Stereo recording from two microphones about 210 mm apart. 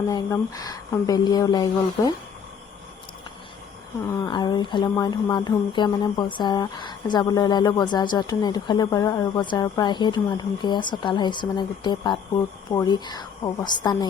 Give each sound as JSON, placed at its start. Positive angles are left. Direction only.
{"t": 0.1, "sound": "speech", "side_deg": 15}
{"t": 4.1, "sound": "speech", "side_deg": 20}